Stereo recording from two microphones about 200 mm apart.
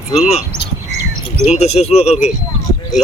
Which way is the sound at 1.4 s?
35° left (ahead or behind).